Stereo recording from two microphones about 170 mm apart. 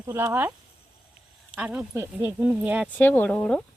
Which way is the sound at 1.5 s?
5° right (ahead or behind).